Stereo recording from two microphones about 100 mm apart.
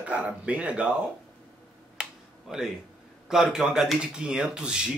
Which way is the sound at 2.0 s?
5° right (ahead or behind).